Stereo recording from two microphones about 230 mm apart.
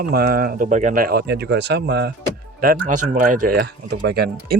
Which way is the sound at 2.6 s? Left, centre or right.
Right.